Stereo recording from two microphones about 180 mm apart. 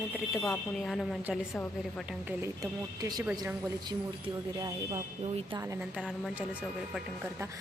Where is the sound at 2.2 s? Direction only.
15° right (ahead or behind).